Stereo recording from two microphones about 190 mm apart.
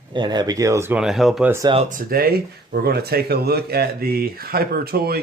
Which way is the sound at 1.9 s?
50° right (ahead or behind).